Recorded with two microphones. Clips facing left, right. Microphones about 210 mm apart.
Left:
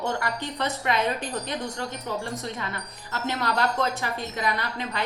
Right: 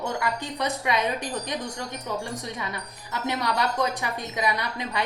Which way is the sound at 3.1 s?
15° right (ahead or behind).